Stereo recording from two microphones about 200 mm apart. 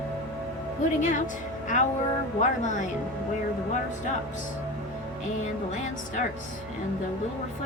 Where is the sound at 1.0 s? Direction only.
40° left (ahead or behind).